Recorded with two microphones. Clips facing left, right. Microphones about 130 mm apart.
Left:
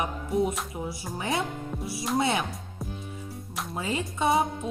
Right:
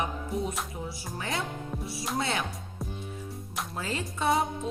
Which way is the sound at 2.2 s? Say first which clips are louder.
Left 5 dB; 25° left (ahead or behind).